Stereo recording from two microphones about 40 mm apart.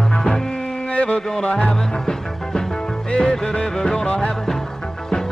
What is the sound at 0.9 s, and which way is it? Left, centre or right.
Music, left.